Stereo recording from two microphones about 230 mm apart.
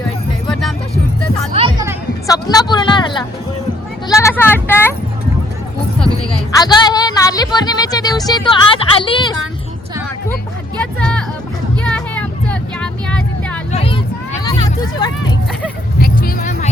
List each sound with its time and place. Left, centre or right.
2.2 s speech: centre
4.1 s a sound: centre
6.6 s speech: centre
11.0 s music: centre
11.8 s vehicle: centre
13.7 s vehicle: left
14.4 s hubbub: centre
16.0 s vehicle: left